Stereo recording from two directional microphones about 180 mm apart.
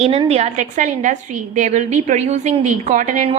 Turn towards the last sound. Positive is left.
turn(degrees=-45)  # may be behind; listen again after turning